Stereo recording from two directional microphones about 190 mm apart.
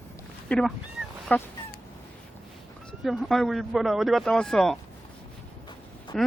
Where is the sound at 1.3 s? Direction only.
10° left (ahead or behind).